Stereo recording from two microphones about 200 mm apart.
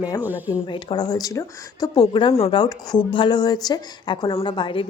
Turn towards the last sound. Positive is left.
turn(degrees=25)  # may be behind; listen again after turning